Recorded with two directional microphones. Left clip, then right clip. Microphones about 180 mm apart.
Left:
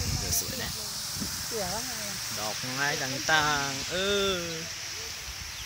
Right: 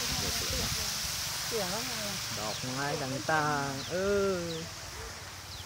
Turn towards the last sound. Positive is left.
turn(degrees=20)  # may be behind; listen again after turning